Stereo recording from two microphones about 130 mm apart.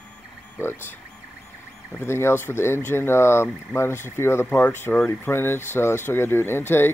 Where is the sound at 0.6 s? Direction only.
15° left (ahead or behind).